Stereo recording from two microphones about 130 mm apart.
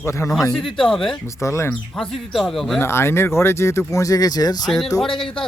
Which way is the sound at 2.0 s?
Centre (ahead or behind).